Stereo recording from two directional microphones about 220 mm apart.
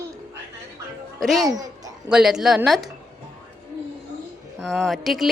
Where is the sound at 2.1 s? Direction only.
5° right (ahead or behind).